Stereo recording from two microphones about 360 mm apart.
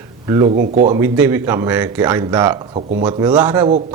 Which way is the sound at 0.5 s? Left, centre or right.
Right.